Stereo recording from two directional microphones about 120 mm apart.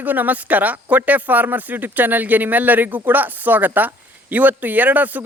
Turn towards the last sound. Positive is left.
turn(degrees=-15)  # may be behind; listen again after turning